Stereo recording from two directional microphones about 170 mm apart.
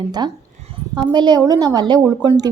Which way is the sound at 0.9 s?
25° right (ahead or behind).